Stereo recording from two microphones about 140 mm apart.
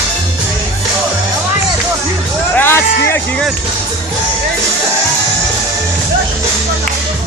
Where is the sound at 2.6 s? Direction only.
15° left (ahead or behind).